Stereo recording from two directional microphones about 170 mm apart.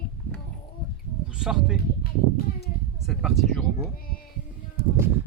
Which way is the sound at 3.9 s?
60° left (ahead or behind).